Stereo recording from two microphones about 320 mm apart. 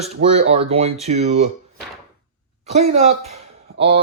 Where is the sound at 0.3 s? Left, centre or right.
Centre.